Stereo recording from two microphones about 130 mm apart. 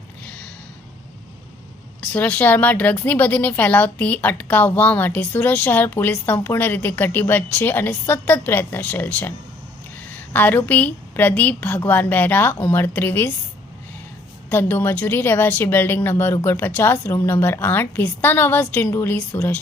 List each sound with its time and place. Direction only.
2.1 s a woman's voice: 10° left (ahead or behind)
14.5 s a woman's voice: 15° left (ahead or behind)